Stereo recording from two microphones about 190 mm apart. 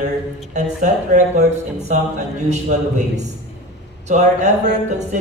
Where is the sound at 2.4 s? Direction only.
40° right (ahead or behind).